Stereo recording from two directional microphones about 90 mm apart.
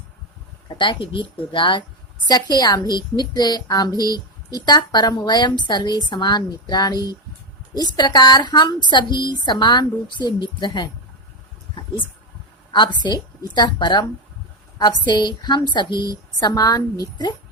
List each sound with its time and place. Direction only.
0.7 s speech: 70° left (ahead or behind)
2.2 s a woman's voice: 55° left (ahead or behind)
13.0 s a woman's voice: 50° left (ahead or behind)